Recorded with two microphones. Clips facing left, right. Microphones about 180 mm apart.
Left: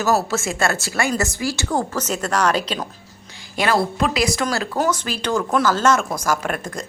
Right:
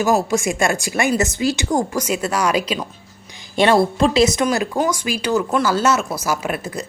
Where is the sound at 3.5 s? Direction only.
25° right (ahead or behind).